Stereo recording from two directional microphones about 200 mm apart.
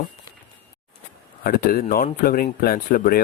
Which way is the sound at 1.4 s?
45° left (ahead or behind).